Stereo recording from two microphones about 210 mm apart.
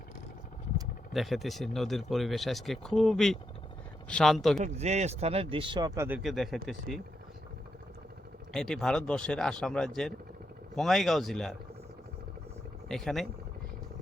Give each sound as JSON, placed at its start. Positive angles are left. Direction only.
{"t": 1.1, "sound": "speech", "side_deg": 0}
{"t": 4.6, "sound": "speech", "side_deg": -30}
{"t": 8.5, "sound": "speech", "side_deg": 5}
{"t": 12.9, "sound": "speech", "side_deg": 0}